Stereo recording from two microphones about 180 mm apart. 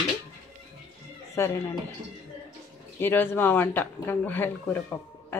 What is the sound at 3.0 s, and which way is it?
Speech, 10° left (ahead or behind).